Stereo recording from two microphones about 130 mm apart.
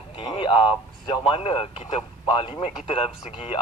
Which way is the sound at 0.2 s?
40° left (ahead or behind).